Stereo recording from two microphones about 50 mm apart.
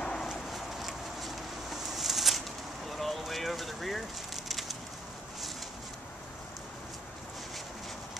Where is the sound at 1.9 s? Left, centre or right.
Centre.